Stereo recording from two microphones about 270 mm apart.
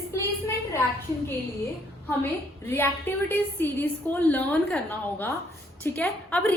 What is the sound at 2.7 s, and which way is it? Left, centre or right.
A woman's voice, centre.